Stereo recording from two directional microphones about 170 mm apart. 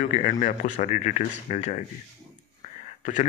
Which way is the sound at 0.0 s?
45° left (ahead or behind).